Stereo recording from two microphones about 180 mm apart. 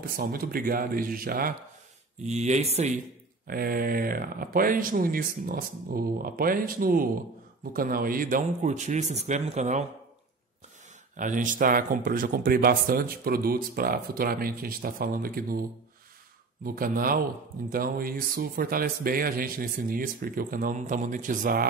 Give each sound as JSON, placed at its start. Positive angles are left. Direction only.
{"t": 0.1, "sound": "speech", "side_deg": -55}
{"t": 2.2, "sound": "speech", "side_deg": -40}
{"t": 3.4, "sound": "speech", "side_deg": -55}
{"t": 11.1, "sound": "speech", "side_deg": -45}
{"t": 16.6, "sound": "speech", "side_deg": -50}